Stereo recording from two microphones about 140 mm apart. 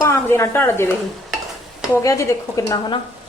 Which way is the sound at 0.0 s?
20° left (ahead or behind).